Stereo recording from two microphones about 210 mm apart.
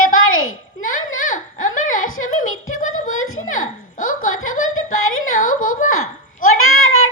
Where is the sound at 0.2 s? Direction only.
75° left (ahead or behind).